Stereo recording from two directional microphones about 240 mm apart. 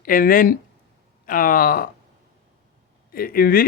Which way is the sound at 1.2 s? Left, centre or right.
Left.